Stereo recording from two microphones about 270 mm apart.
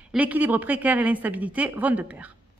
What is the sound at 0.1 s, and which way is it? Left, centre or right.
A woman's voice, centre.